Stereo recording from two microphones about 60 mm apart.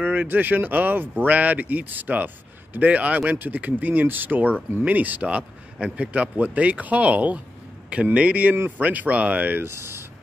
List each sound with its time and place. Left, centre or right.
0.0 s speech: right